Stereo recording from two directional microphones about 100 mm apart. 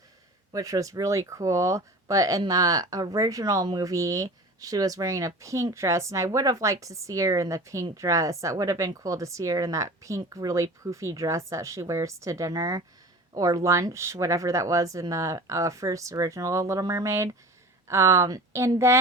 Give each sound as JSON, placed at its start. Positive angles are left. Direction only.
{"t": 0.5, "sound": "a woman's voice", "side_deg": -35}